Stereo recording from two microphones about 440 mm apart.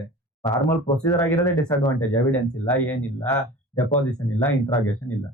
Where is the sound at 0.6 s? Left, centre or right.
Centre.